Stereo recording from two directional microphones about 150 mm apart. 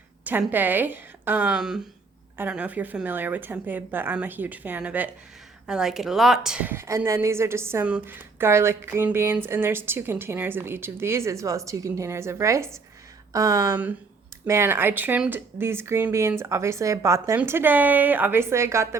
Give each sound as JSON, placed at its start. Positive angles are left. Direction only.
{"t": 0.3, "sound": "a woman's voice", "side_deg": -10}